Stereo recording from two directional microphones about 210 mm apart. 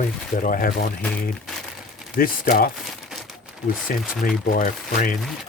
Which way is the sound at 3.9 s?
45° left (ahead or behind).